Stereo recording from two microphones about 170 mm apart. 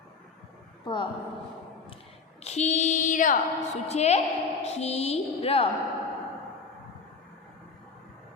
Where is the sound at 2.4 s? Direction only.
40° left (ahead or behind).